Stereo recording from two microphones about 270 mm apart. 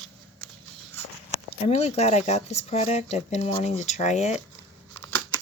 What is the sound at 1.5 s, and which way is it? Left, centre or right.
Speech, left.